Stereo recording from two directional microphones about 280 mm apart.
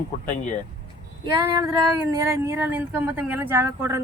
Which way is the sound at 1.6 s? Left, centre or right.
Centre.